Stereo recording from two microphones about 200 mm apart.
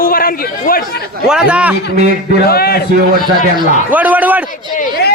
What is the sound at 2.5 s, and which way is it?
Speech, 50° left (ahead or behind).